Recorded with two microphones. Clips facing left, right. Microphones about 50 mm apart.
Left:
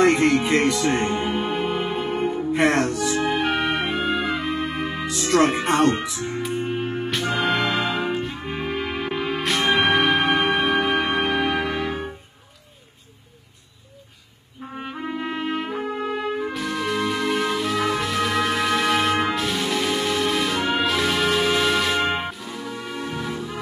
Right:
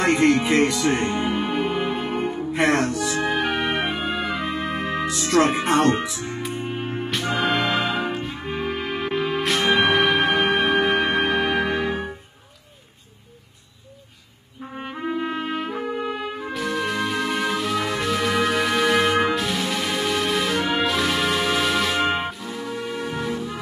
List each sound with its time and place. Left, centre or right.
0.0 s music: centre
14.6 s trumpet: centre
19.2 s music: centre